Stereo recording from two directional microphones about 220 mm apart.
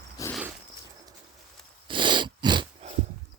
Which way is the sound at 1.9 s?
20° right (ahead or behind).